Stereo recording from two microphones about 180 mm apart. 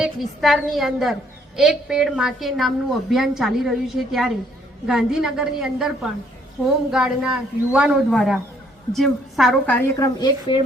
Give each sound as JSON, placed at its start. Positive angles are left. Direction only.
{"t": 0.0, "sound": "a woman's voice", "side_deg": 0}
{"t": 9.7, "sound": "a woman's voice", "side_deg": 15}